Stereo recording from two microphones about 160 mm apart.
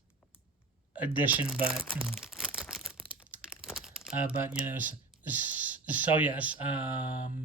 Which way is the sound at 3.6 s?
5° right (ahead or behind).